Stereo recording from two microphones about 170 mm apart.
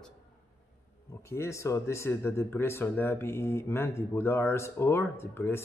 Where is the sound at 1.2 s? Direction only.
15° left (ahead or behind).